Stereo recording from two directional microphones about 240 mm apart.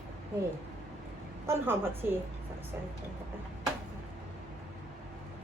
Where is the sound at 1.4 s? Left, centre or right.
Centre.